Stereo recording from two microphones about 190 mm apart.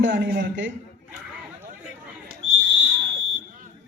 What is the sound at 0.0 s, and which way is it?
Speech, 75° right (ahead or behind).